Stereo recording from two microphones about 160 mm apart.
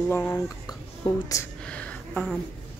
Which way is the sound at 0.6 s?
20° left (ahead or behind).